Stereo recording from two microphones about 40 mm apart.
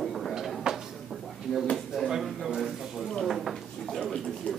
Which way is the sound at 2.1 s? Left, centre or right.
Centre.